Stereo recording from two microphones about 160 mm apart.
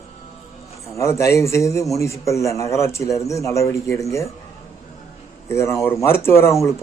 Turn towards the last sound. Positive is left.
turn(degrees=15)  # may be behind; listen again after turning